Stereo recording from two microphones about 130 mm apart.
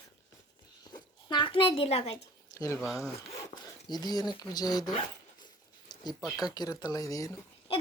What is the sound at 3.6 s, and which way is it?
Speech, 30° left (ahead or behind).